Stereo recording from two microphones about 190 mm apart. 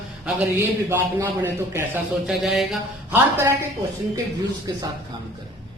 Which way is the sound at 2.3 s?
Centre (ahead or behind).